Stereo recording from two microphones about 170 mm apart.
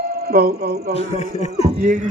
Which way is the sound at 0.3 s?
65° right (ahead or behind).